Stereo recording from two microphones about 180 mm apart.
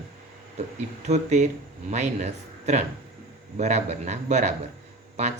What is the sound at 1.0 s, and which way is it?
Speech, 40° right (ahead or behind).